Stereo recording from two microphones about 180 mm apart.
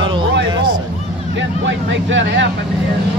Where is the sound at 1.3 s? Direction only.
85° right.